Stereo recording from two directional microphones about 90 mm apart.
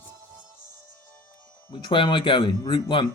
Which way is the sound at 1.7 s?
65° left (ahead or behind).